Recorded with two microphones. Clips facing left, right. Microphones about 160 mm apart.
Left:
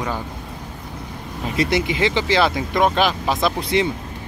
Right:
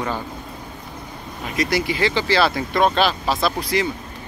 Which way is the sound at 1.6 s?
25° left (ahead or behind).